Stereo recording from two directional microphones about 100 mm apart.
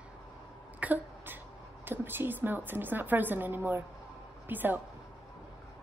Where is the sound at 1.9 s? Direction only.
20° right (ahead or behind).